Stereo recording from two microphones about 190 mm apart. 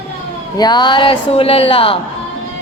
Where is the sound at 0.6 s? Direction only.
20° left (ahead or behind).